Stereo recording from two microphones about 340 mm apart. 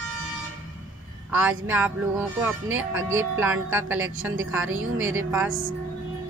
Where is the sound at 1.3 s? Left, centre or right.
Centre.